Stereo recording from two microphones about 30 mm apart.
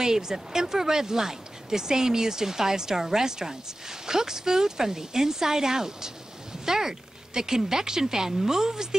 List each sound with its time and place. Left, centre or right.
0.0 s speech: centre